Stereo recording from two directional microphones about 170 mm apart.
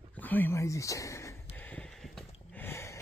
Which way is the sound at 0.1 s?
10° left (ahead or behind).